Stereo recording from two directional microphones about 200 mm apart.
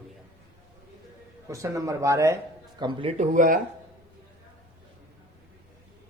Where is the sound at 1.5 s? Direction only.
15° right (ahead or behind).